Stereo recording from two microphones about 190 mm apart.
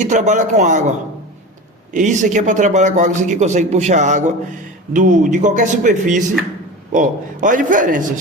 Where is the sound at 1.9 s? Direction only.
40° right (ahead or behind).